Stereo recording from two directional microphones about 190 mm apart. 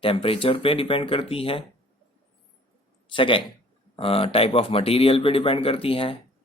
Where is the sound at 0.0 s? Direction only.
30° left (ahead or behind).